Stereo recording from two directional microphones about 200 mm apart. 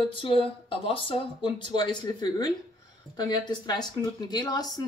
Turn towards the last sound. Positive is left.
turn(degrees=20)  # may be behind; listen again after turning